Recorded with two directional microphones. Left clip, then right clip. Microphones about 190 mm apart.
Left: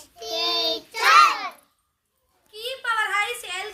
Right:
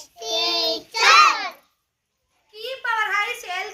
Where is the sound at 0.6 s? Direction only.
30° right (ahead or behind).